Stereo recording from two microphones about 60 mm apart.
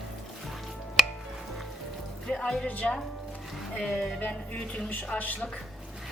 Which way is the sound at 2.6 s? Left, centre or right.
Left.